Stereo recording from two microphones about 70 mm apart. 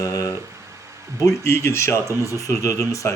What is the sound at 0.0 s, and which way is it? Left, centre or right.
Speech, left.